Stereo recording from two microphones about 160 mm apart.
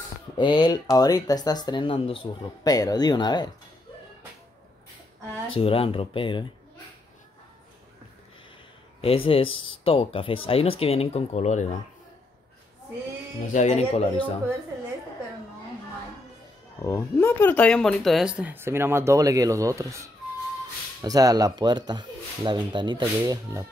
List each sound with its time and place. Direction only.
0.4 s speech: 30° left (ahead or behind)
2.7 s speech: 25° left (ahead or behind)
5.6 s speech: 35° left (ahead or behind)
9.0 s speech: 35° left (ahead or behind)
13.5 s speech: 45° left (ahead or behind)
16.8 s speech: 15° left (ahead or behind); by 20.0 s 20° right (ahead or behind)
21.0 s speech: 25° right (ahead or behind)